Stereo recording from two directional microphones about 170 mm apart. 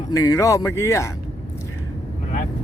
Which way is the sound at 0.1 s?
20° left (ahead or behind).